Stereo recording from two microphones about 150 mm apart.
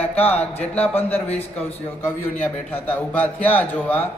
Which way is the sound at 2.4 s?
10° left (ahead or behind).